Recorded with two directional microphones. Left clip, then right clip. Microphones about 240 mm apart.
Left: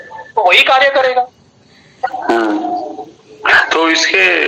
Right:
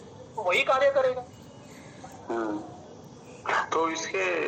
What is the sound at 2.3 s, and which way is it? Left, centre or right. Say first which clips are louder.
A man's voice: left 17 dB; left.